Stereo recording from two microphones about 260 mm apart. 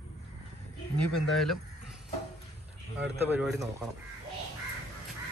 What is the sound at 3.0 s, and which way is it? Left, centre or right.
Speech, centre.